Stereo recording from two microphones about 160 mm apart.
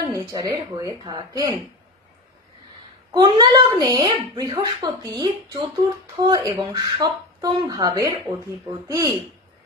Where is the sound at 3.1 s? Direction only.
25° right (ahead or behind).